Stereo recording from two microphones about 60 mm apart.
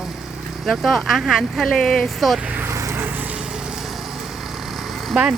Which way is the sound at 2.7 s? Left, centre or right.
Right.